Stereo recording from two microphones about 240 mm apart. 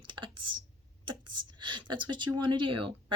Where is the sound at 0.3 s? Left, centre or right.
Right.